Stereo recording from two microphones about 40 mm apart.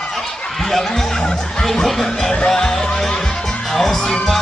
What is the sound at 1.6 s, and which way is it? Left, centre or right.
Music, centre.